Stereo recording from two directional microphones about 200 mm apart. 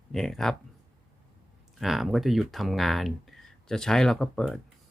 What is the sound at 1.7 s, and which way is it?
Speech, centre (ahead or behind).